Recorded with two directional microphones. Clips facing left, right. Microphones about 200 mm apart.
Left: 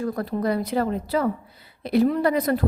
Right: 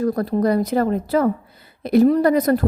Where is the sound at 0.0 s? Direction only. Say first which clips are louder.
Right 6 dB; 40° right (ahead or behind).